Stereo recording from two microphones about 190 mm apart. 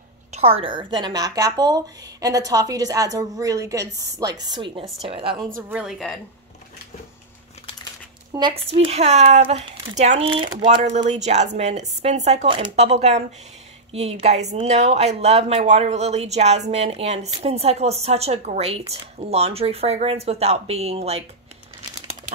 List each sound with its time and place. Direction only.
0.3 s a woman's voice: 30° right (ahead or behind)
5.6 s a woman's voice: 5° right (ahead or behind)
8.3 s speech: 25° right (ahead or behind)